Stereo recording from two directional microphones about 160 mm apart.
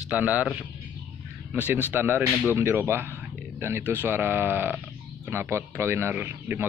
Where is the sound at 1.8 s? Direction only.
15° right (ahead or behind).